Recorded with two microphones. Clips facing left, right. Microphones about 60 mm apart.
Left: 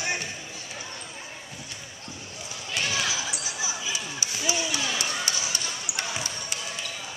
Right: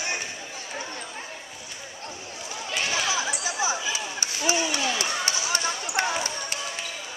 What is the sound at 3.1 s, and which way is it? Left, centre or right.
Basketball bounce, right.